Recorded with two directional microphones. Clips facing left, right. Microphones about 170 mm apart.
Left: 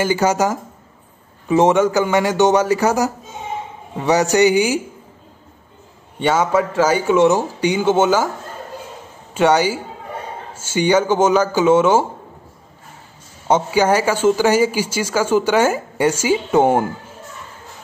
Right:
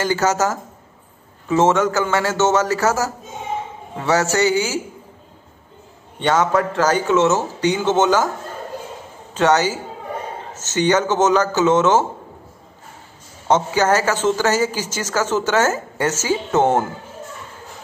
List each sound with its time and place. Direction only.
0.0 s a woman's voice: 15° left (ahead or behind)
6.1 s a woman's voice: 10° left (ahead or behind)
9.3 s a woman's voice: 10° left (ahead or behind)
13.5 s a woman's voice: 10° left (ahead or behind)